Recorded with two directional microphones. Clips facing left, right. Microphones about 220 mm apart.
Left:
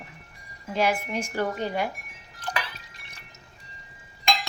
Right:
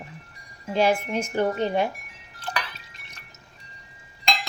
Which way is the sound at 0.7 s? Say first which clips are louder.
Right 4 dB; 30° right (ahead or behind).